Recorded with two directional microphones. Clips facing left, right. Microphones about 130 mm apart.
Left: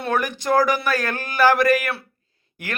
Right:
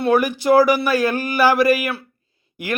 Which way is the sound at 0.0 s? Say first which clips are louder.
Right 6 dB; 10° right (ahead or behind).